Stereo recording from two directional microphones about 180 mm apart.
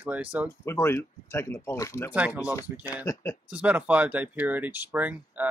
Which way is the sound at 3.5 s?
10° right (ahead or behind).